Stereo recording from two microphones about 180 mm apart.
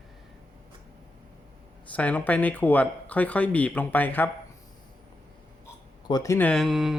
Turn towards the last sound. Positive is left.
turn(degrees=0)  # may be behind; listen again after turning